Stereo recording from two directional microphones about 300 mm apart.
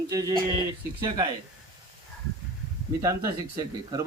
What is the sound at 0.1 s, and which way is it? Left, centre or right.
Speech, centre.